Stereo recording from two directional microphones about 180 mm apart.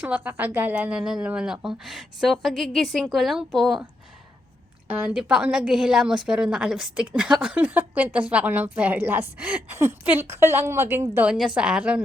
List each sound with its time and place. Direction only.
0.0 s speech: 10° right (ahead or behind)
4.9 s a woman's voice: 10° right (ahead or behind)